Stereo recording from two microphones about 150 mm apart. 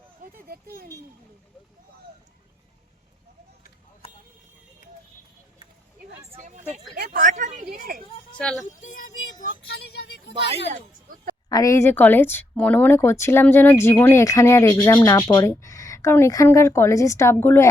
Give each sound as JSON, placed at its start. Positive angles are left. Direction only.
{"t": 0.2, "sound": "speech", "side_deg": -70}
{"t": 6.4, "sound": "speech", "side_deg": -50}
{"t": 6.9, "sound": "speech", "side_deg": -85}
{"t": 8.4, "sound": "speech", "side_deg": 5}
{"t": 8.8, "sound": "speech", "side_deg": 65}
{"t": 11.4, "sound": "speech", "side_deg": 25}